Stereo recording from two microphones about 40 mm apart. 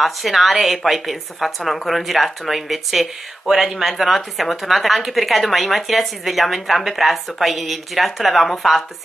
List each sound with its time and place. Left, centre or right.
0.0 s a woman's voice: centre